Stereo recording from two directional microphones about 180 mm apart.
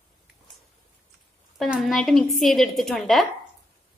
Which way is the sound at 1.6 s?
Centre (ahead or behind).